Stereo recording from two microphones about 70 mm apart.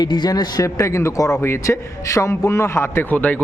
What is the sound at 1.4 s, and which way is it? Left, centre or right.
A man's voice, left.